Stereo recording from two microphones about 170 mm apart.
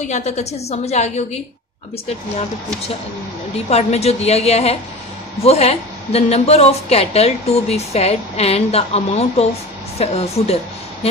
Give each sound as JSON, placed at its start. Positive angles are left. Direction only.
{"t": 0.0, "sound": "speech", "side_deg": 40}
{"t": 3.5, "sound": "speech", "side_deg": 40}